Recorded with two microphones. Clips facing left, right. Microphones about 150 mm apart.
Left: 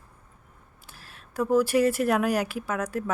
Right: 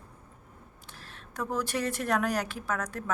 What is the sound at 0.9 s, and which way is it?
Speech, 10° left (ahead or behind).